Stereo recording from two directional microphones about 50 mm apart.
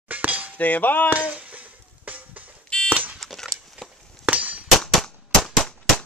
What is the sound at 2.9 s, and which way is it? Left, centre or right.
Alarm, right.